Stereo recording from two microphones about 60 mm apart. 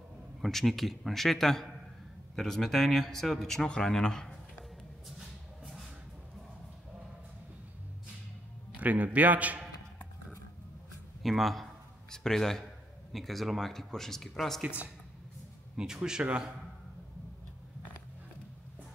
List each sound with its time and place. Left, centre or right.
0.4 s speech: centre
8.7 s a man's voice: right
11.2 s speech: centre
15.7 s a man's voice: centre